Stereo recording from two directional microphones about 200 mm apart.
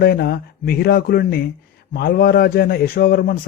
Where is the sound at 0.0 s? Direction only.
50° left (ahead or behind).